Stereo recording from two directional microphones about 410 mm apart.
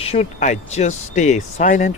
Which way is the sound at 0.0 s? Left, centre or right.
Centre.